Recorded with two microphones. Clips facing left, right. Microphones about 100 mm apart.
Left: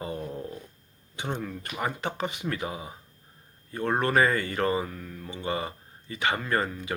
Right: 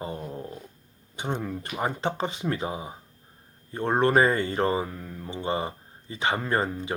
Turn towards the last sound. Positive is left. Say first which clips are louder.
# right 2 dB
turn(degrees=-25)  # may be behind; listen again after turning